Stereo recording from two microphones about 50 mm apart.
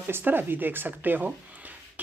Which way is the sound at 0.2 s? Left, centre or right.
Right.